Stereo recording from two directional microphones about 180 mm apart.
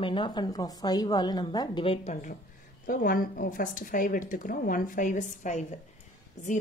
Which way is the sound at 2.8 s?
50° left (ahead or behind).